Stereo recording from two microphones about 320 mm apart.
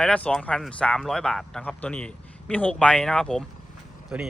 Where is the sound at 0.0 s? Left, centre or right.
Centre.